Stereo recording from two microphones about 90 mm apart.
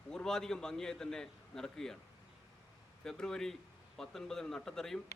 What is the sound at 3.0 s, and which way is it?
A man's voice, 5° left (ahead or behind).